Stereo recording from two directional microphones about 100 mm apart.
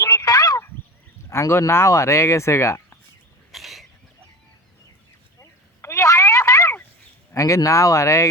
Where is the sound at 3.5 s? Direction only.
Centre (ahead or behind).